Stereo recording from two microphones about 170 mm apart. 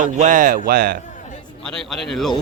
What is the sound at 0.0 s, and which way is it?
Speech, 50° right (ahead or behind).